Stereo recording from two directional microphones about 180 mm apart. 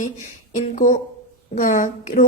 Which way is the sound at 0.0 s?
45° left (ahead or behind).